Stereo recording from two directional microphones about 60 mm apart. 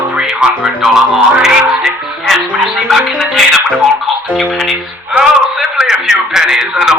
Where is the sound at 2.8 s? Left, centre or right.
Centre.